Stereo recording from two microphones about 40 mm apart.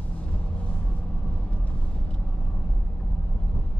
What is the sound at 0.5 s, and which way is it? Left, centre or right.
Vehicle, left.